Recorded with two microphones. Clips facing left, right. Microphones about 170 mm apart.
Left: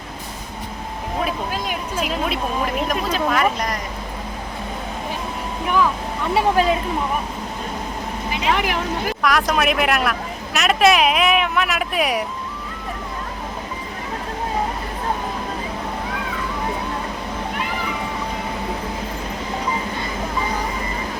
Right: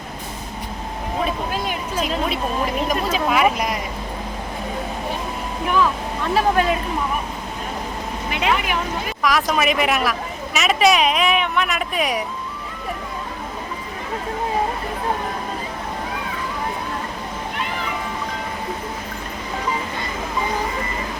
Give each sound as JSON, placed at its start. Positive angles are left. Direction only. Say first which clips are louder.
{"t": 1.2, "sound": "speech", "louder": "right 1 dB", "side_deg": 5}
{"t": 3.2, "sound": "speech", "louder": "right 3 dB", "side_deg": -10}
{"t": 6.3, "sound": "speech", "louder": "left 1 dB", "side_deg": 25}
{"t": 8.3, "sound": "speech", "louder": "right 1 dB", "side_deg": -65}
{"t": 8.5, "sound": "speech", "louder": "left 2 dB", "side_deg": 90}
{"t": 9.2, "sound": "speech", "louder": "even", "side_deg": 0}